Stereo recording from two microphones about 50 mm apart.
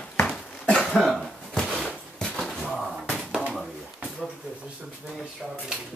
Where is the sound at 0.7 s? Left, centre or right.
Centre.